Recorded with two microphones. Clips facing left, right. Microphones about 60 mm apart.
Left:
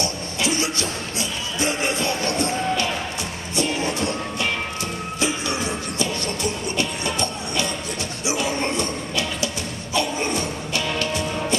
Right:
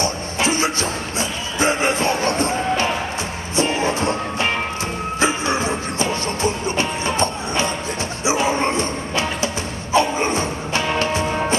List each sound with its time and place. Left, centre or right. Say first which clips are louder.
0.0 s music: right 4 dB; right